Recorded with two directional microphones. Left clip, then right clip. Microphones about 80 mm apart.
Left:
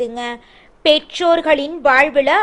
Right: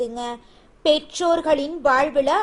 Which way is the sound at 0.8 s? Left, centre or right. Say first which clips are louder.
Left 5 dB; right.